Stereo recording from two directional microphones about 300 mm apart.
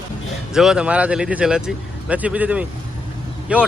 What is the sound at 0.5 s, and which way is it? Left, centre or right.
Speech, centre.